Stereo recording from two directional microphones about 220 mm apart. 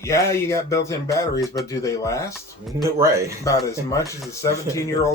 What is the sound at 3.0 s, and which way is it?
Speech, 15° right (ahead or behind).